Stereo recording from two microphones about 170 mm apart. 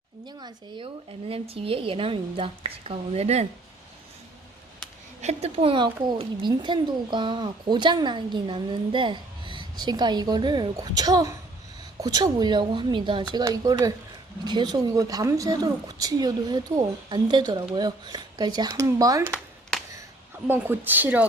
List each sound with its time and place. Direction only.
0.3 s a woman's voice: 25° right (ahead or behind)
5.2 s speech: 40° right (ahead or behind); by 19.3 s 20° right (ahead or behind)
20.5 s a woman's voice: 10° right (ahead or behind)